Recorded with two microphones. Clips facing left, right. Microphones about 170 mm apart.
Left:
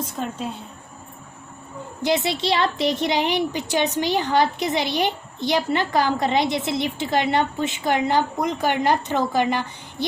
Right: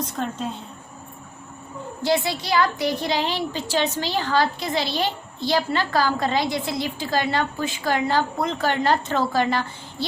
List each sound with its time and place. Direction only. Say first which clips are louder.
0.2 s a woman's voice: right 1 dB; 5° left (ahead or behind)
2.0 s a woman's voice: left 1 dB; 20° left (ahead or behind)